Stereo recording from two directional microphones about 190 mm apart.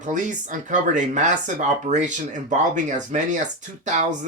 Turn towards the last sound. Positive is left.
turn(degrees=-40)  # may be behind; listen again after turning